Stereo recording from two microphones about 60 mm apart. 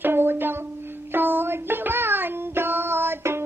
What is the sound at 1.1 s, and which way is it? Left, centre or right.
Music, right.